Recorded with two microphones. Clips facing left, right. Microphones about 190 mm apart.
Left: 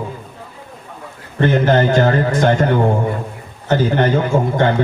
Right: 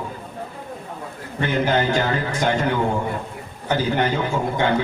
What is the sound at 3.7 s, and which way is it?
Speech, 50° left (ahead or behind).